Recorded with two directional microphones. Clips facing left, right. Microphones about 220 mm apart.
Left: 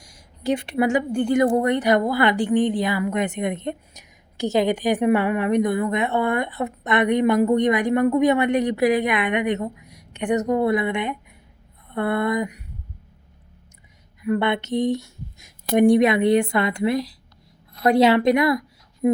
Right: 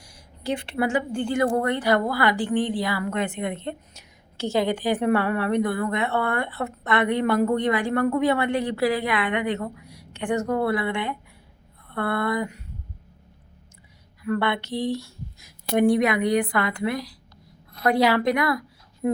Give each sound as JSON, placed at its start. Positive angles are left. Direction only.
{"t": 0.0, "sound": "a sound", "side_deg": 20}
{"t": 1.2, "sound": "a woman's voice", "side_deg": 20}
{"t": 14.2, "sound": "a woman's voice", "side_deg": 20}